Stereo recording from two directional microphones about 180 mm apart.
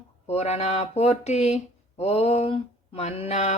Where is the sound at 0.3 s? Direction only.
35° left (ahead or behind).